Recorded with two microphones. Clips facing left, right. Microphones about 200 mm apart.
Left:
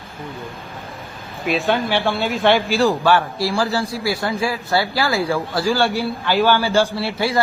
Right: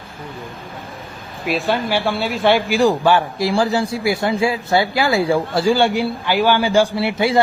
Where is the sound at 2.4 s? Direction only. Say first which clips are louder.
Right 2 dB; 15° right (ahead or behind).